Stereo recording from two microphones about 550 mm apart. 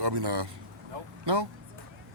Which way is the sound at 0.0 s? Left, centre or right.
Right.